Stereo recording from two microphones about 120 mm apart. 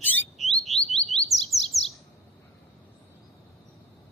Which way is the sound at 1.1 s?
60° left (ahead or behind).